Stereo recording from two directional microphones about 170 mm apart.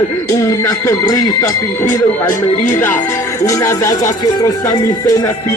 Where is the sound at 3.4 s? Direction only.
20° left (ahead or behind).